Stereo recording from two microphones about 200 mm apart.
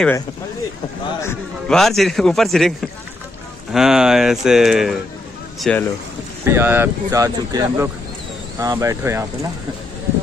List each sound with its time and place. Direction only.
1.7 s speech: centre (ahead or behind)
6.4 s speech: 10° right (ahead or behind)